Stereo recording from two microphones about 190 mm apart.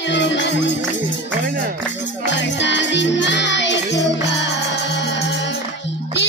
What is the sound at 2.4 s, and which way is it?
Music, 70° left (ahead or behind).